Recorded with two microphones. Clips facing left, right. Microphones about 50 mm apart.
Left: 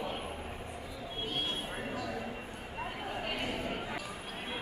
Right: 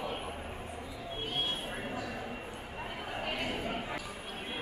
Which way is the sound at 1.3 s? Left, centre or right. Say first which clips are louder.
Right 1 dB; centre.